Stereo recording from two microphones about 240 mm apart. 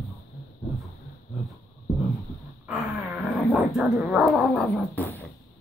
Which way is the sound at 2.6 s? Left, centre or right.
Centre.